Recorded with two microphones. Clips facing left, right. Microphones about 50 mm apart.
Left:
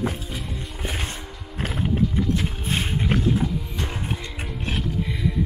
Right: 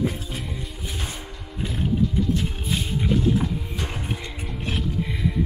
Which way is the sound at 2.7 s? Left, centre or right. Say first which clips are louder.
Left 2 dB; left.